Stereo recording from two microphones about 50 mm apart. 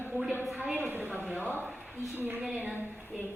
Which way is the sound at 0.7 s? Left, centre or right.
Right.